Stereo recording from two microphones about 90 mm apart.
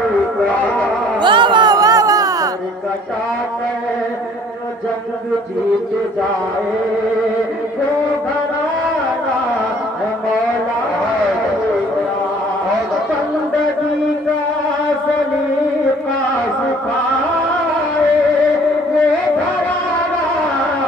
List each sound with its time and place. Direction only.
1.2 s music: 60° right (ahead or behind); by 2.5 s 40° right (ahead or behind)